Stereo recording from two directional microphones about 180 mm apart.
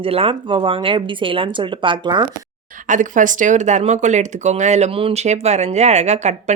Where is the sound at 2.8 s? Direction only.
45° right (ahead or behind).